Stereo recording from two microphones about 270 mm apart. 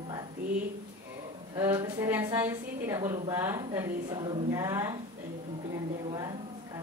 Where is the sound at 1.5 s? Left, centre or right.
Centre.